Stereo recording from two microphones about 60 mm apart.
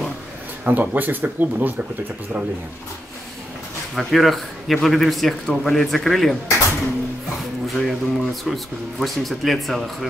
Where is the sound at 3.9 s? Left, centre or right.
Centre.